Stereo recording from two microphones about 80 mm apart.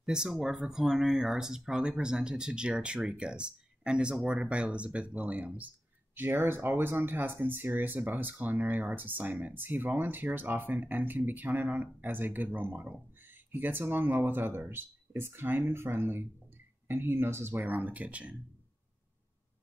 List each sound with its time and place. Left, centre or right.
0.0 s speech: centre